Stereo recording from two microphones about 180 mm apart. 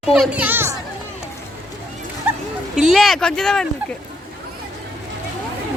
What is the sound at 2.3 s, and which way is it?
Bow-wow, 10° right (ahead or behind).